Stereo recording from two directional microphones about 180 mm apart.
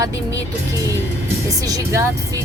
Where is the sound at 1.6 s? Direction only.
20° right (ahead or behind).